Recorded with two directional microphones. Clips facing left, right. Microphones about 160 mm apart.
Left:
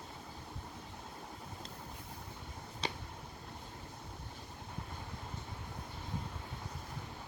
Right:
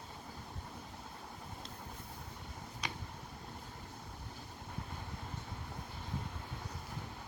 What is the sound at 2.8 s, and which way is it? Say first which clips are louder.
Vehicle: left 4 dB; 30° left (ahead or behind).